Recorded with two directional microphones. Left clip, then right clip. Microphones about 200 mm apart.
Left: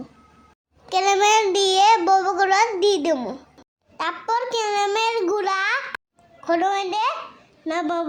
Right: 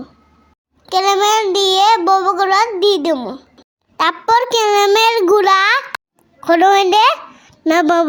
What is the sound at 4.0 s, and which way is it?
A child's voice, 30° right (ahead or behind).